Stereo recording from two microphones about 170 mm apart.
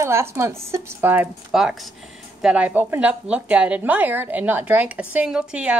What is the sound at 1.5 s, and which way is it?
Speech, centre (ahead or behind).